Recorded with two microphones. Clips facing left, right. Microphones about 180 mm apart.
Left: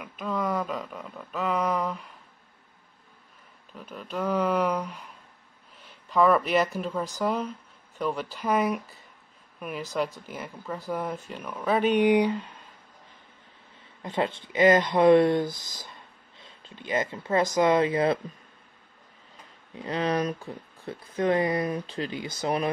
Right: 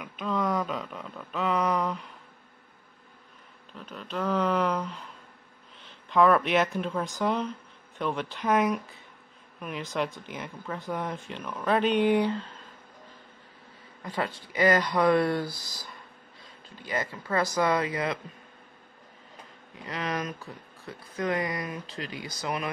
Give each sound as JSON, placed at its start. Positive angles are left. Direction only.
{"t": 0.0, "sound": "speech", "side_deg": 5}
{"t": 3.7, "sound": "speech", "side_deg": 10}
{"t": 14.0, "sound": "speech", "side_deg": 25}
{"t": 19.8, "sound": "speech", "side_deg": 30}